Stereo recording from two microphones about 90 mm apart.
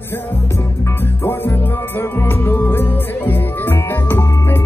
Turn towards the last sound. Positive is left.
turn(degrees=30)  # may be behind; listen again after turning